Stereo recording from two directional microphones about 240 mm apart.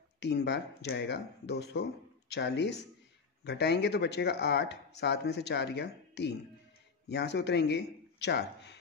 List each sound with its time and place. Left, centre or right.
0.2 s speech: left